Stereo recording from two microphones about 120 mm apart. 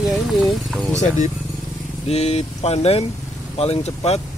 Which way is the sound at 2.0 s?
60° left (ahead or behind).